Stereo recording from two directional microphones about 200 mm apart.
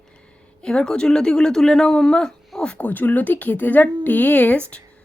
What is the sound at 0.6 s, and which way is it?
Speech, 5° left (ahead or behind).